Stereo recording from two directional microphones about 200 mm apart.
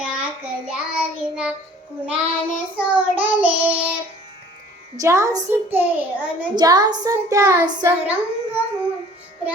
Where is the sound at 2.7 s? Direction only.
5° right (ahead or behind).